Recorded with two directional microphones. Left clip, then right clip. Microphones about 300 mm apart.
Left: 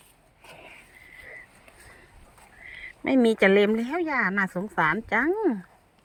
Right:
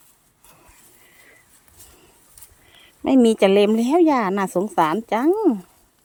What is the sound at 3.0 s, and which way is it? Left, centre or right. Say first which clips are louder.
Speech: right 5 dB; centre.